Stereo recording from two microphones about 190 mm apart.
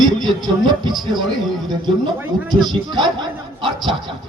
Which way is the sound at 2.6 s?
25° right (ahead or behind).